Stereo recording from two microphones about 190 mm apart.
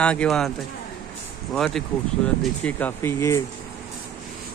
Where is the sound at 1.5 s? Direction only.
Centre (ahead or behind).